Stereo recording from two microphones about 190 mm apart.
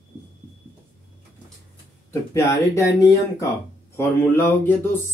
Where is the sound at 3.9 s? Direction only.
15° left (ahead or behind).